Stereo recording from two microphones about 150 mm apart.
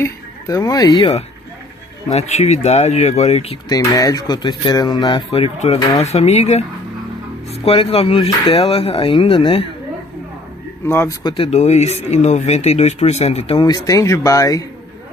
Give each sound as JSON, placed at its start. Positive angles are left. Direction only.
{"t": 0.0, "sound": "speech", "side_deg": 20}
{"t": 2.0, "sound": "speech", "side_deg": 45}
{"t": 3.6, "sound": "speech", "side_deg": 25}
{"t": 10.9, "sound": "speech", "side_deg": 15}
{"t": 11.2, "sound": "speech", "side_deg": 40}
{"t": 13.7, "sound": "speech", "side_deg": 20}